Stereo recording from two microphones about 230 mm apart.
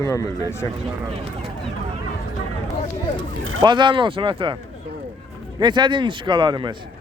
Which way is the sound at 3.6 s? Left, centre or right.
Centre.